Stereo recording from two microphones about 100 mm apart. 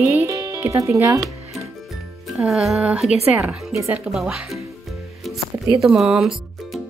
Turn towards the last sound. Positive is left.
turn(degrees=-5)  # may be behind; listen again after turning